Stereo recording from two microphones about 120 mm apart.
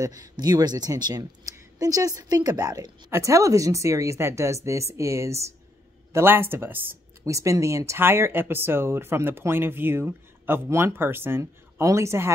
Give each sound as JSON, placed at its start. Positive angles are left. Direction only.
{"t": 0.0, "sound": "speech", "side_deg": -30}